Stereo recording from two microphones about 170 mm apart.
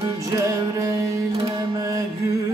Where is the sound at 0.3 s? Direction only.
20° right (ahead or behind).